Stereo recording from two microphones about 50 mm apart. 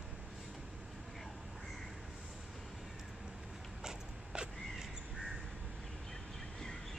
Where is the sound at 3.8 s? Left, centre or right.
Centre.